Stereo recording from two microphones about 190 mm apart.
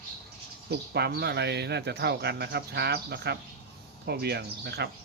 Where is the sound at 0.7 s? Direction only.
60° right (ahead or behind).